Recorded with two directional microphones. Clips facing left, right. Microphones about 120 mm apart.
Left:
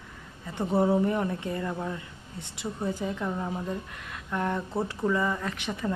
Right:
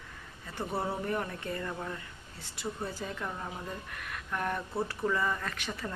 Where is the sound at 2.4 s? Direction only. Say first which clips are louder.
Left 4 dB; 20° left (ahead or behind).